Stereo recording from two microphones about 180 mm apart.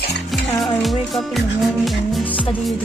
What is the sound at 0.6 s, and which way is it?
Music, centre (ahead or behind).